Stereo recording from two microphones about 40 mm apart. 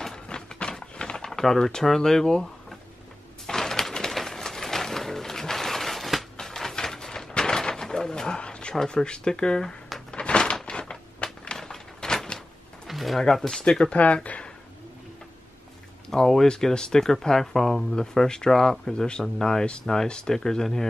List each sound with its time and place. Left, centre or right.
0.1 s a sound: left
1.4 s speech: centre
3.4 s pigeon: centre
6.4 s a sound: centre
11.5 s door: centre
12.8 s pigeon: centre
13.2 s speech: centre
13.6 s speech: left
13.9 s speech: left
16.1 s speech: centre